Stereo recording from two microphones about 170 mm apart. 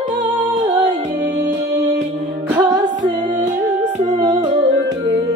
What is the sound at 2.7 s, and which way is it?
Music, 25° right (ahead or behind).